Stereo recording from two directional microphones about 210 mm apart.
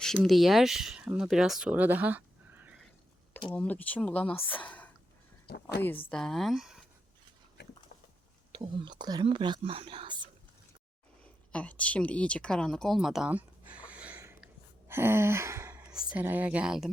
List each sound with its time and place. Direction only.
0.0 s speech: centre (ahead or behind)
3.5 s speech: 5° left (ahead or behind)
5.5 s a sound: 50° left (ahead or behind)
6.1 s speech: centre (ahead or behind)
8.5 s speech: 20° right (ahead or behind)
11.5 s speech: 5° left (ahead or behind)